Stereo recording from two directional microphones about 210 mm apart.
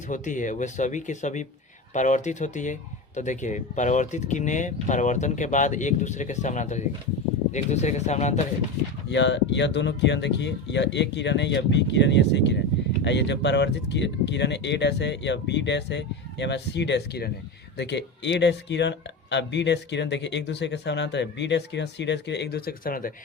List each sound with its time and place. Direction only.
0.1 s speech: 35° left (ahead or behind)
9.0 s speech: 60° left (ahead or behind); by 23.1 s 40° left (ahead or behind)